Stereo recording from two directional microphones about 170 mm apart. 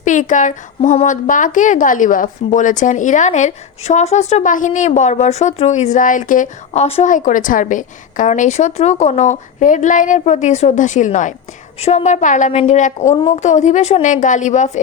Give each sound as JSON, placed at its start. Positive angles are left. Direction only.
{"t": 0.0, "sound": "a woman's voice", "side_deg": 50}
{"t": 6.8, "sound": "a woman's voice", "side_deg": 35}
{"t": 7.1, "sound": "a woman's voice", "side_deg": 50}
{"t": 13.1, "sound": "a woman's voice", "side_deg": 30}
{"t": 13.4, "sound": "a woman's voice", "side_deg": 45}